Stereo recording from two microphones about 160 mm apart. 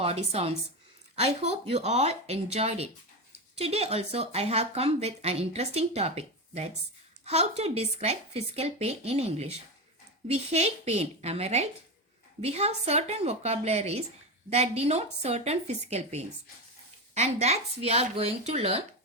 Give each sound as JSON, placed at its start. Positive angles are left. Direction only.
{"t": 0.0, "sound": "speech", "side_deg": -40}